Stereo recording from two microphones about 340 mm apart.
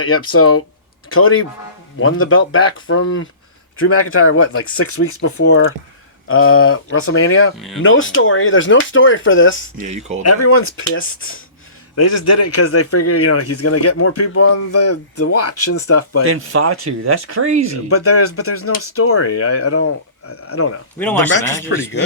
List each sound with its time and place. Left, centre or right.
0.0 s speech: left
9.7 s speech: centre
10.2 s speech: left
11.9 s speech: left
16.3 s speech: right
17.8 s speech: left
21.4 s speech: centre